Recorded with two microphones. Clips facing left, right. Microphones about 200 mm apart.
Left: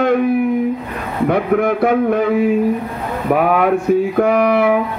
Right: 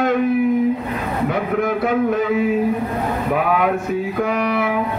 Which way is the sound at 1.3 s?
55° left (ahead or behind).